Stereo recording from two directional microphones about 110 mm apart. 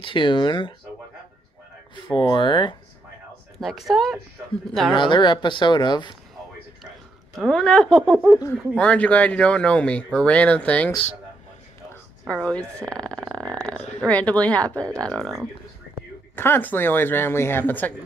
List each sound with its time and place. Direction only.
0.0 s speech: 50° left (ahead or behind)
2.1 s speech: 50° left (ahead or behind)
3.5 s speech: centre (ahead or behind)
4.9 s speech: 45° left (ahead or behind)
7.3 s speech: 5° left (ahead or behind)
12.3 s speech: 10° left (ahead or behind)
13.3 s a sound: 35° right (ahead or behind)
13.6 s speech: 10° left (ahead or behind)
16.3 s speech: 20° left (ahead or behind)